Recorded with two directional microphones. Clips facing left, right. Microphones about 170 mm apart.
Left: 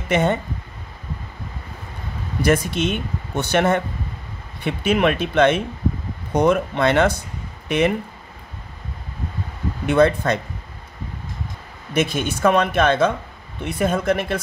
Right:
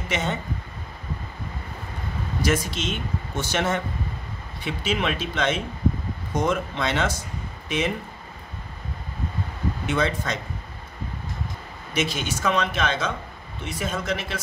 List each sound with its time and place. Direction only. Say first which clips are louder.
0.1 s speech: left 9 dB; 55° left (ahead or behind)
2.4 s speech: left 6 dB; 60° left (ahead or behind)
9.8 s speech: left 10 dB; 55° left (ahead or behind)
11.9 s speech: left 5 dB; 55° left (ahead or behind)